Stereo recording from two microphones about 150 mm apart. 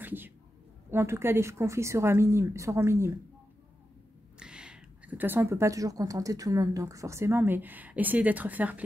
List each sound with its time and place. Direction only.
0.0 s a sound: 15° right (ahead or behind)
0.8 s speech: 15° right (ahead or behind)
4.4 s speech: 5° right (ahead or behind)